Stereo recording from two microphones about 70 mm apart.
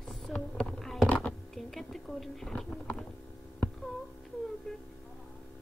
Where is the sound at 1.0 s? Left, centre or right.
Centre.